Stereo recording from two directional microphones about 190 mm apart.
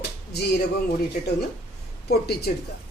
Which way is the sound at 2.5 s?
50° left (ahead or behind).